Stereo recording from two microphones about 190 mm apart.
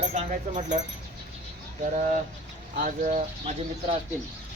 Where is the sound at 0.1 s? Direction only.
35° right (ahead or behind).